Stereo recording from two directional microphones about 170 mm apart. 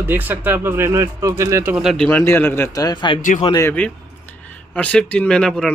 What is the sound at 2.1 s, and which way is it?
A man's voice, 15° left (ahead or behind).